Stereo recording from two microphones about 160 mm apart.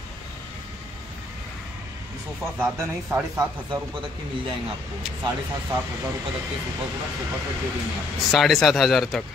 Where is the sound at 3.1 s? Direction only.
15° right (ahead or behind).